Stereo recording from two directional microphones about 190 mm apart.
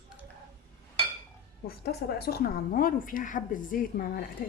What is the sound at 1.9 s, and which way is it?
A woman's voice, 55° left (ahead or behind).